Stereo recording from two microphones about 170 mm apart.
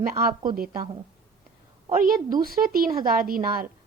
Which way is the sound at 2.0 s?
55° right (ahead or behind).